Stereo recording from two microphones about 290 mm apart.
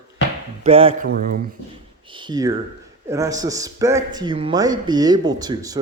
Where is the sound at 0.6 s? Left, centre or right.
Centre.